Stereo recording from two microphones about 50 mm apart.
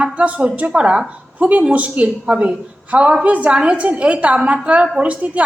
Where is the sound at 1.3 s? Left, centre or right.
Right.